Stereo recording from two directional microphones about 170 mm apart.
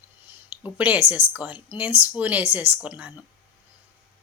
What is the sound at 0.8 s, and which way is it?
A woman's voice, 10° right (ahead or behind).